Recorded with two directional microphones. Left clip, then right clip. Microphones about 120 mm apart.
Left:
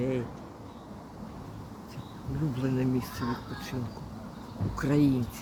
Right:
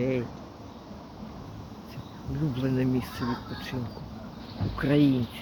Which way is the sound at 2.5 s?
25° right (ahead or behind).